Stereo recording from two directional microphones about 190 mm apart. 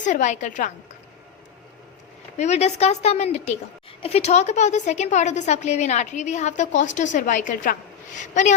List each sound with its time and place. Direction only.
0.0 s a woman's voice: 40° left (ahead or behind)
2.4 s a woman's voice: 35° left (ahead or behind)